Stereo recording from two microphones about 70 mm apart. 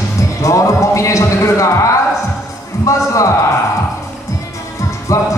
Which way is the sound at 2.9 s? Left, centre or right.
Left.